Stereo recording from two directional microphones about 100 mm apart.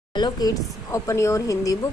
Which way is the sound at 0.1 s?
45° left (ahead or behind).